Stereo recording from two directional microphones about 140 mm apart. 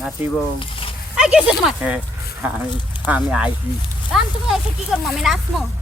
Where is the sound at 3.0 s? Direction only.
10° right (ahead or behind).